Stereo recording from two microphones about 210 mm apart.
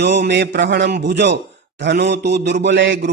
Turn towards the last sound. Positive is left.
turn(degrees=-65)  # may be behind; listen again after turning